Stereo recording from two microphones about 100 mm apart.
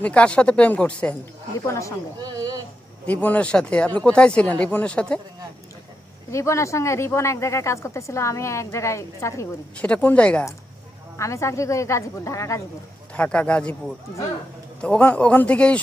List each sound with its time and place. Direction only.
0.0 s speech: 10° left (ahead or behind)
1.5 s speech: 30° left (ahead or behind)
2.2 s a sound: 40° right (ahead or behind)
3.1 s speech: 15° left (ahead or behind)
6.3 s speech: 30° left (ahead or behind)
9.7 s speech: 15° left (ahead or behind)
11.2 s speech: 30° left (ahead or behind)
13.1 s speech: 10° left (ahead or behind)
14.8 s speech: 15° left (ahead or behind)